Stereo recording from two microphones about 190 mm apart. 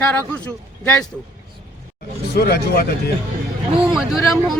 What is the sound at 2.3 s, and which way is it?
Speech, 55° left (ahead or behind).